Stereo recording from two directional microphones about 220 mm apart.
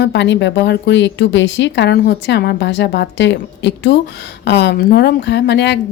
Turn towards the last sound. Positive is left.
turn(degrees=50)  # may be behind; listen again after turning